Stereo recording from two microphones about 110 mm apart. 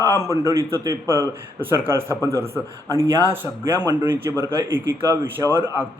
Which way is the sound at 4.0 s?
20° right (ahead or behind).